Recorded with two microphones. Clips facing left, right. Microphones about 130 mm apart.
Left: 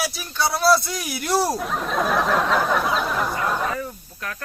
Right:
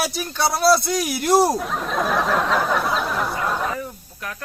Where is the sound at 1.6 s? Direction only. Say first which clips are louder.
Even; centre (ahead or behind).